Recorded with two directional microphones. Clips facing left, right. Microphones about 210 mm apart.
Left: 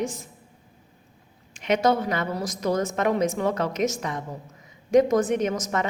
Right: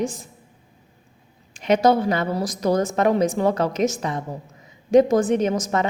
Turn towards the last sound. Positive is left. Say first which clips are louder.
# right 4 dB
turn(degrees=-30)  # may be behind; listen again after turning